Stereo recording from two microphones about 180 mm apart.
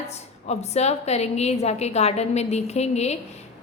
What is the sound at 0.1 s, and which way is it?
A woman's voice, 35° left (ahead or behind).